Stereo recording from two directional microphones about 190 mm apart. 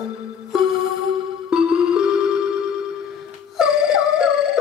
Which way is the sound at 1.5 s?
5° right (ahead or behind).